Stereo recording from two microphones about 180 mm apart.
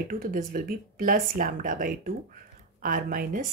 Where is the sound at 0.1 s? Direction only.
50° right (ahead or behind).